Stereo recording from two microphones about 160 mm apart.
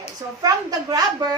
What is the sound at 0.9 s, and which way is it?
Speech, 25° right (ahead or behind).